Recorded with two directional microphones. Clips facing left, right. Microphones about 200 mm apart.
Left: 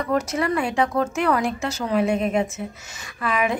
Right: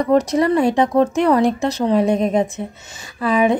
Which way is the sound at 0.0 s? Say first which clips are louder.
Right 7 dB; 35° right (ahead or behind).